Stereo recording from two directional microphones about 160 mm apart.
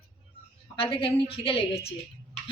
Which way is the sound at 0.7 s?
35° left (ahead or behind).